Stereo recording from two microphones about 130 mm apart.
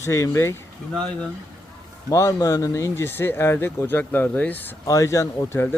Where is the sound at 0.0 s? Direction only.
20° left (ahead or behind).